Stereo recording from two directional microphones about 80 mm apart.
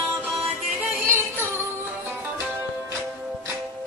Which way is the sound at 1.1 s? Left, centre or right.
Right.